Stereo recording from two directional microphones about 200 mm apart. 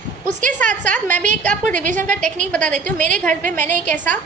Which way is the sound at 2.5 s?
5° left (ahead or behind).